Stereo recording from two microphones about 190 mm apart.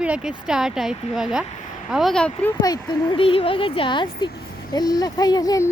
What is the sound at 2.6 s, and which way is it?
Speech, 20° left (ahead or behind).